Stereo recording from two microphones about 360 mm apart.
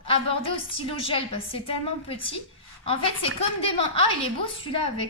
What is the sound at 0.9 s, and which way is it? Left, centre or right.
Speech, centre.